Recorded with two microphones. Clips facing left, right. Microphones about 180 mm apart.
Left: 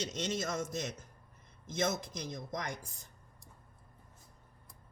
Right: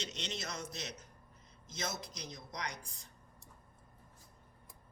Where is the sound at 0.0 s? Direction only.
45° left (ahead or behind).